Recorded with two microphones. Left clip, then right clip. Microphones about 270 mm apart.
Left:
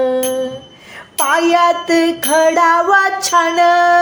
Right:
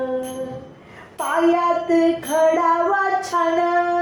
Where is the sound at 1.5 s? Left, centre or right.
Left.